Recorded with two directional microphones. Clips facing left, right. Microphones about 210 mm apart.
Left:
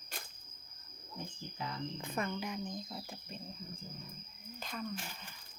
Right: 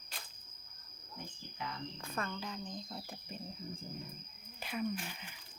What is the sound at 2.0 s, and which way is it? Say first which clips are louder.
A woman's voice: left 3 dB; 15° left (ahead or behind).